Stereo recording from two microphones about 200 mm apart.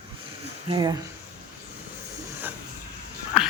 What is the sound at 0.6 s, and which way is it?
Speech, 20° right (ahead or behind).